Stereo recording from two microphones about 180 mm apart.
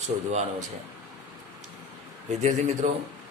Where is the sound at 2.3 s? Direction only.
40° right (ahead or behind).